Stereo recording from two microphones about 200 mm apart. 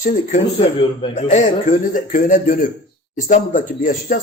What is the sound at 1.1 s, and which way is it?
Speech, 35° left (ahead or behind).